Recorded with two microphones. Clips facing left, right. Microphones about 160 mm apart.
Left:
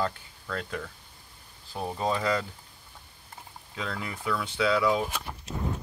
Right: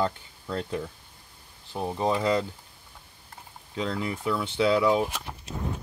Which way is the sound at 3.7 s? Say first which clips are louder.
Right 6 dB; 25° right (ahead or behind).